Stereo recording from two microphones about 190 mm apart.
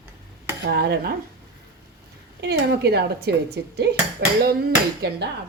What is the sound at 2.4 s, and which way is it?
Speech, 60° right (ahead or behind).